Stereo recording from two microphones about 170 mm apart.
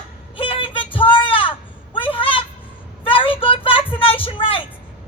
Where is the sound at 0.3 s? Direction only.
30° left (ahead or behind).